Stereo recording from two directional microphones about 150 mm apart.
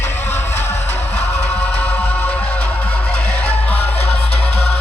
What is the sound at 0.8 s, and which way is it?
Music, 45° left (ahead or behind).